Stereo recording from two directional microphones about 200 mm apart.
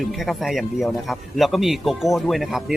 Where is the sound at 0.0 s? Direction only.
Centre (ahead or behind).